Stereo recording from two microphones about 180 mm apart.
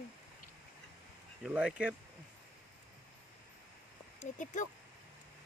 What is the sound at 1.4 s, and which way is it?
Speech, 5° right (ahead or behind).